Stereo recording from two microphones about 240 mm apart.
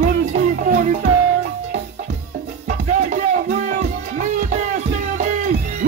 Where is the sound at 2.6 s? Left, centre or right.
Right.